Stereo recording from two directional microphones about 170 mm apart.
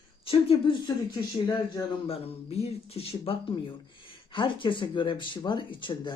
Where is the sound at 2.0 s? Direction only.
35° left (ahead or behind).